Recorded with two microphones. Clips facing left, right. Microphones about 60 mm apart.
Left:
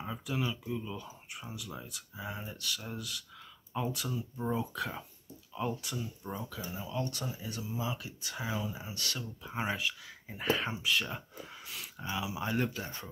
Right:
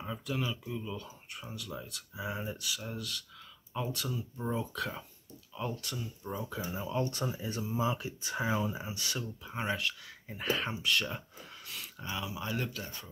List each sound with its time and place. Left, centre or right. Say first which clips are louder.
0.0 s speech: even; centre
2.1 s speech: right 4 dB; centre
2.7 s speech: right 1 dB; centre
6.7 s speech: right 3 dB; right
9.4 s speech: left 1 dB; centre
11.6 s a sound: even; centre
12.3 s speech: left 6 dB; left